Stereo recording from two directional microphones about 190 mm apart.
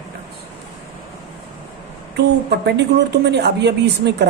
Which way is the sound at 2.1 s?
65° right (ahead or behind).